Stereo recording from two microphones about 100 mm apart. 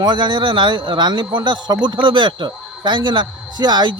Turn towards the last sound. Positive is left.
turn(degrees=-45)  # may be behind; listen again after turning